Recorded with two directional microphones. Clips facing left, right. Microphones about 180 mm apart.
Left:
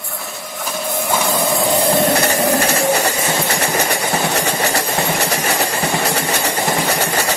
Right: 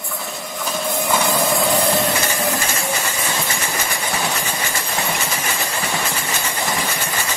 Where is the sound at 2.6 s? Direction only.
65° left (ahead or behind).